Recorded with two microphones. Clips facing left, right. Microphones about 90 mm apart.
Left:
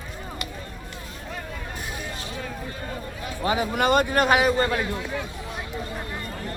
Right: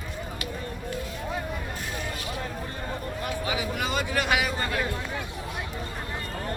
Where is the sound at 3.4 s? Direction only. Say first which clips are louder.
Left 10 dB; 45° left (ahead or behind).